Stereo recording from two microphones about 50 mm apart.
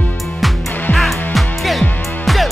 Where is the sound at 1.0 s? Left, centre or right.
Centre.